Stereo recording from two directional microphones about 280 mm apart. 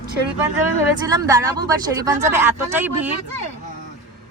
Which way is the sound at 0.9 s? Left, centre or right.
Centre.